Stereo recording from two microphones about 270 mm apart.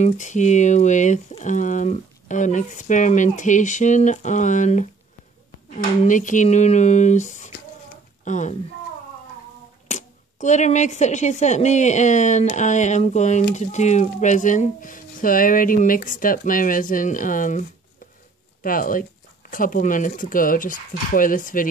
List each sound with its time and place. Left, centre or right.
0.0 s speech: left
6.0 s speech: left
9.8 s speech: left